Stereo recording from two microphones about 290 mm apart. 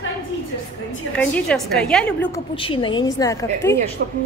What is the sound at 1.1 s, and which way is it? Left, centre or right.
A woman's voice, centre.